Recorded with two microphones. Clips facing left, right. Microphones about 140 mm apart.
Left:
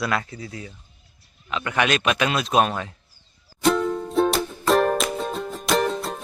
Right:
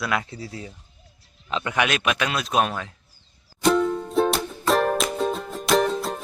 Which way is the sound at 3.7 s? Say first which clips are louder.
Right 1 dB; centre (ahead or behind).